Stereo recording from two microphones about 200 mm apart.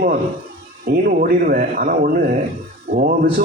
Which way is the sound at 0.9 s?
45° right (ahead or behind).